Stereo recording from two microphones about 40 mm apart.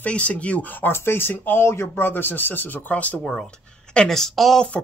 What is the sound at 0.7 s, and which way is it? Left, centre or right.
Speech, left.